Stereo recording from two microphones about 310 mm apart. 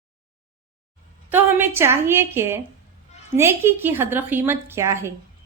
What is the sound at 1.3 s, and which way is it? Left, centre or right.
A woman's voice, centre.